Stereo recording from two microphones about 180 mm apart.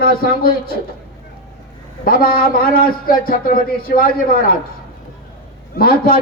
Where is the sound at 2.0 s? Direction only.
55° left (ahead or behind).